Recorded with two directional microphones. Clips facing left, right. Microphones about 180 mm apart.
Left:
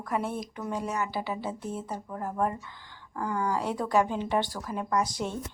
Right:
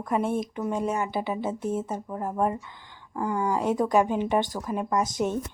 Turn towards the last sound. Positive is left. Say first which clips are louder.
# right 4 dB
turn(degrees=-20)  # may be behind; listen again after turning